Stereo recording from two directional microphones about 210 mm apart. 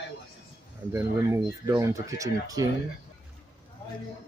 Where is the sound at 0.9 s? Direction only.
15° right (ahead or behind).